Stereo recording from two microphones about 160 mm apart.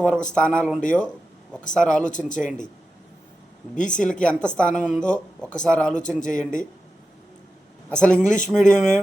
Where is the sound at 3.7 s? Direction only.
50° left (ahead or behind).